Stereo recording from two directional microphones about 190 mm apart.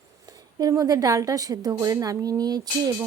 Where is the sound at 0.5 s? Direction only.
20° right (ahead or behind).